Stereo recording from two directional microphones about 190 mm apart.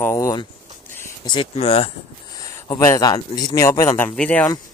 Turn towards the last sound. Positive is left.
turn(degrees=10)  # may be behind; listen again after turning